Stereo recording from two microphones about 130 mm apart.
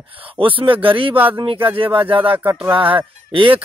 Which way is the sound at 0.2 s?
45° right (ahead or behind).